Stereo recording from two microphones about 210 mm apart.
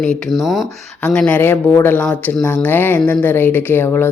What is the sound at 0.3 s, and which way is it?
Speech, centre (ahead or behind).